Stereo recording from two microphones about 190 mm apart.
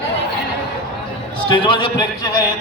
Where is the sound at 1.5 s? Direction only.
25° left (ahead or behind).